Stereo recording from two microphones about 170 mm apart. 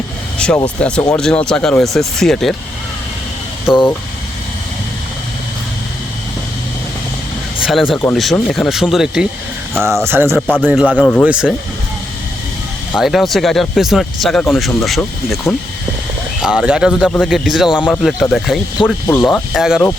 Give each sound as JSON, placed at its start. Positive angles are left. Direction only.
{"t": 0.3, "sound": "speech", "side_deg": 5}
{"t": 3.7, "sound": "speech", "side_deg": -5}
{"t": 7.6, "sound": "speech", "side_deg": 0}
{"t": 9.8, "sound": "speech", "side_deg": -15}
{"t": 10.3, "sound": "speech", "side_deg": 0}
{"t": 10.6, "sound": "speech", "side_deg": -10}
{"t": 11.0, "sound": "speech", "side_deg": 10}
{"t": 11.3, "sound": "speech", "side_deg": -5}
{"t": 12.9, "sound": "speech", "side_deg": 0}
{"t": 17.7, "sound": "speech", "side_deg": 10}